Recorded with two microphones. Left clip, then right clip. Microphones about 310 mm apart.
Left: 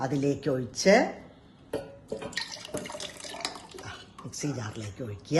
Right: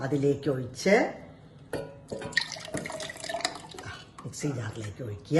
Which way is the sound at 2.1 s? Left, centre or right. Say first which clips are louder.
Right 7 dB; centre.